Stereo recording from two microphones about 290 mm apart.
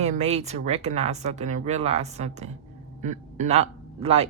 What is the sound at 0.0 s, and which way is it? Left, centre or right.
Speech, right.